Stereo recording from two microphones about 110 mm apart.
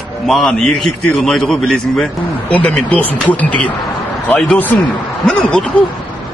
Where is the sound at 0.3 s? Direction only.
5° left (ahead or behind).